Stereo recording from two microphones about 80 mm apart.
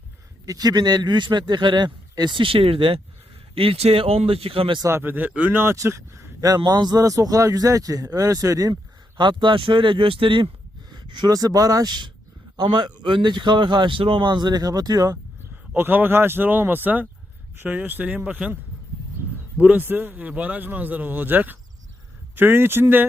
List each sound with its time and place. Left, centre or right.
0.4 s speech: right
4.9 s a man's voice: right
5.7 s speech: right
6.6 s speech: right
7.0 s speech: right
8.7 s speech: right
10.9 s speech: right
15.7 s a man's voice: right
19.5 s a man's voice: right